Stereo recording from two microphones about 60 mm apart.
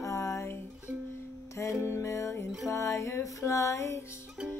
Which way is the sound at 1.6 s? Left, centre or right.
Left.